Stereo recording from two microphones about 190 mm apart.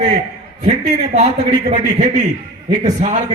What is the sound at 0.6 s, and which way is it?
A man's voice, 35° right (ahead or behind).